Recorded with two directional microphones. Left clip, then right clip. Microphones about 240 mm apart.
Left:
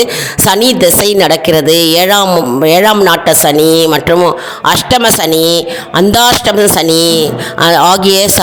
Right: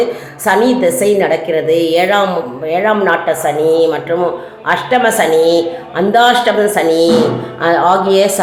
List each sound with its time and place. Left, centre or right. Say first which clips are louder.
0.4 s a woman's voice: left 3 dB; left